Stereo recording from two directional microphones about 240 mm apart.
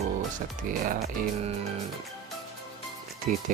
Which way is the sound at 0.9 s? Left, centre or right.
Right.